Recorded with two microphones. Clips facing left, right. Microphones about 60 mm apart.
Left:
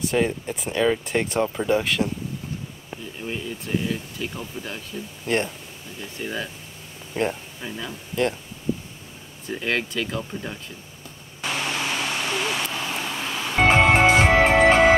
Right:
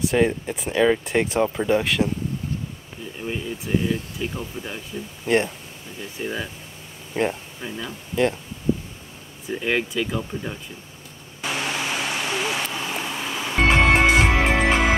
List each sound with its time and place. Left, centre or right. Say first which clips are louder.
0.0 s speech: right 3 dB; centre
3.2 s speech: right 2 dB; centre
9.5 s speech: right 2 dB; centre
11.4 s a sound: even; centre
13.7 s music: left 1 dB; left